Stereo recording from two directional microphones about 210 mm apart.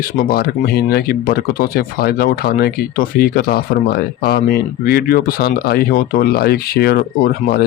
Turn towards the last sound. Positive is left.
turn(degrees=45)  # may be behind; listen again after turning